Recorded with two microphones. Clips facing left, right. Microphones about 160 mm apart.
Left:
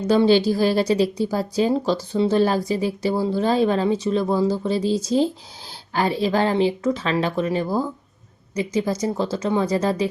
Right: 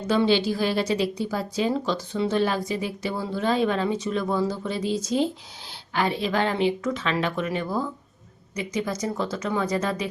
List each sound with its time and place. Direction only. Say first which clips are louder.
0.1 s speech: left 5 dB; 40° left (ahead or behind)